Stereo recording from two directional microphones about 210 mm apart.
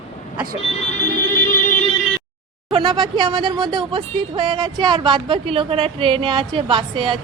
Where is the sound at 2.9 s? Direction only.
20° right (ahead or behind).